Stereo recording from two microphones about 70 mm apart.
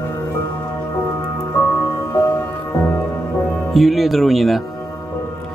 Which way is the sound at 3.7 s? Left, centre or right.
Centre.